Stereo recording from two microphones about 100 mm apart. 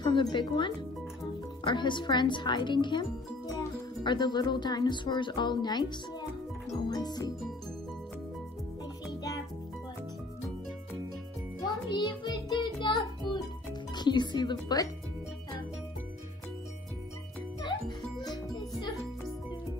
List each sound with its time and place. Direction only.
0.0 s speech: 50° left (ahead or behind)
11.6 s music: 45° left (ahead or behind)
13.9 s speech: 45° left (ahead or behind)
17.6 s music: 45° left (ahead or behind)